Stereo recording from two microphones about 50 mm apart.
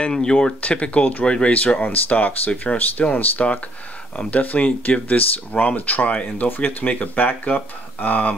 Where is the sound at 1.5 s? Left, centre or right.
Left.